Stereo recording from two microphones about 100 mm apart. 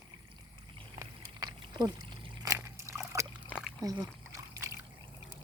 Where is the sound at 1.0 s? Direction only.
35° right (ahead or behind).